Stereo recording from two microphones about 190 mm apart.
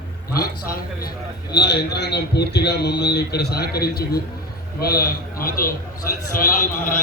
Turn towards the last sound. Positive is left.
turn(degrees=45)  # may be behind; listen again after turning